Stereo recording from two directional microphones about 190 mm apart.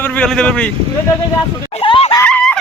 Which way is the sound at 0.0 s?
5° left (ahead or behind).